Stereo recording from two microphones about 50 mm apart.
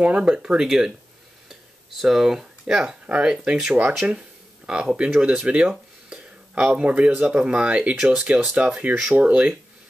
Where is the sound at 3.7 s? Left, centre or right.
Right.